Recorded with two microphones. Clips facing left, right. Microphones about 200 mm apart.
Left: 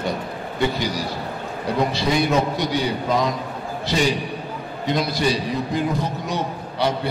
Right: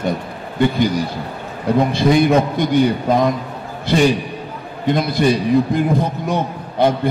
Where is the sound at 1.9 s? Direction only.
55° right (ahead or behind).